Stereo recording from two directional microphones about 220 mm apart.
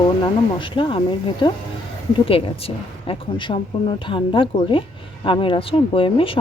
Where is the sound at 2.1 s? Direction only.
25° left (ahead or behind).